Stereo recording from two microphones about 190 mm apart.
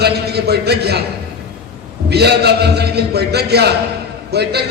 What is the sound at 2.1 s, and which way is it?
A man's voice, 60° right (ahead or behind).